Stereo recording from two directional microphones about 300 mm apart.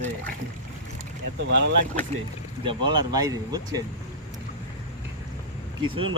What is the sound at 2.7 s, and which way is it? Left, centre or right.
Speech, centre.